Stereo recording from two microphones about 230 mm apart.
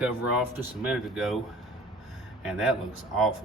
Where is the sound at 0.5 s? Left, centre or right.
Centre.